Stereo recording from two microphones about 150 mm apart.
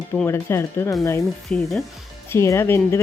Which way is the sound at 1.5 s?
Centre (ahead or behind).